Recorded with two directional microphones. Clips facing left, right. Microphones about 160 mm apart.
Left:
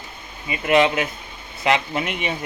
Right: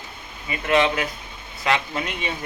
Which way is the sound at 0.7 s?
20° left (ahead or behind).